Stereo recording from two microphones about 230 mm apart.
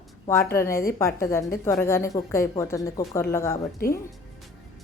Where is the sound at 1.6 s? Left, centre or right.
Centre.